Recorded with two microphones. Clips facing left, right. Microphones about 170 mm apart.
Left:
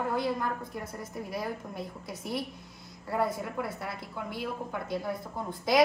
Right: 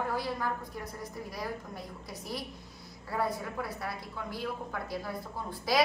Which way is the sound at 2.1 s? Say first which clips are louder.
Left 4 dB; 25° left (ahead or behind).